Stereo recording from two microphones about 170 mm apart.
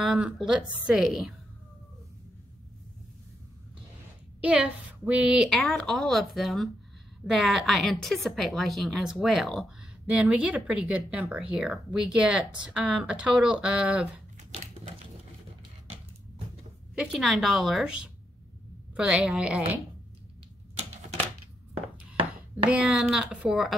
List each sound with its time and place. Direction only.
0.0 s a woman's voice: centre (ahead or behind)
4.4 s a woman's voice: 5° right (ahead or behind)
16.9 s a woman's voice: centre (ahead or behind)
22.7 s a woman's voice: 5° right (ahead or behind)